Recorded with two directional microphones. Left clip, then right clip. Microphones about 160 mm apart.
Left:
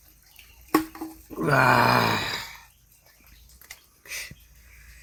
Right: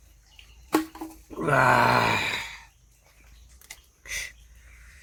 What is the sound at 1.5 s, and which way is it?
Groan, 30° right (ahead or behind).